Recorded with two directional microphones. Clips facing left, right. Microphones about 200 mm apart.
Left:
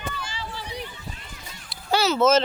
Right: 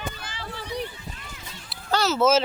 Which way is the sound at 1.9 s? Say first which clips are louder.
Left 2 dB; centre (ahead or behind).